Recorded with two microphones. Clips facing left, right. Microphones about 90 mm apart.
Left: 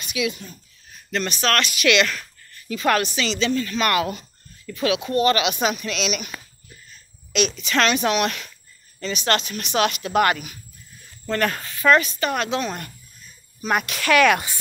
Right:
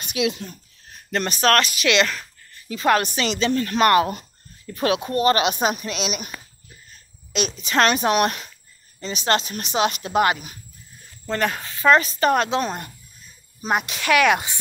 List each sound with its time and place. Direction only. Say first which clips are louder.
0.0 s speech: right 2 dB; 65° right (ahead or behind)
1.1 s speech: right 3 dB; 40° right (ahead or behind); by 3.0 s 25° right (ahead or behind)
3.0 s speech: right 1 dB; 45° right (ahead or behind)
3.8 s speech: right 6 dB; 35° right (ahead or behind)
4.7 s speech: even; 45° right (ahead or behind)
7.3 s speech: even; 35° right (ahead or behind)
9.0 s speech: right 1 dB; 30° right (ahead or behind)
13.6 s speech: even; 25° right (ahead or behind)